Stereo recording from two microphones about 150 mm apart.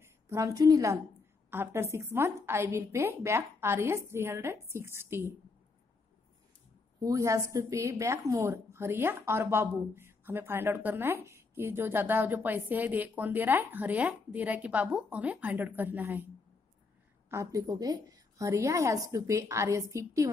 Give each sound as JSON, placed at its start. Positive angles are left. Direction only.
{"t": 0.0, "sound": "a woman's voice", "side_deg": -20}
{"t": 7.0, "sound": "a woman's voice", "side_deg": -25}
{"t": 17.3, "sound": "a woman's voice", "side_deg": -20}